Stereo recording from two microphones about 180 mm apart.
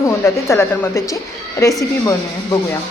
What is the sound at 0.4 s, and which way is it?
A woman's voice, 15° left (ahead or behind).